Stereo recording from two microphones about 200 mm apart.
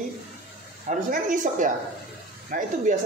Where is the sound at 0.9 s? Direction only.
40° right (ahead or behind).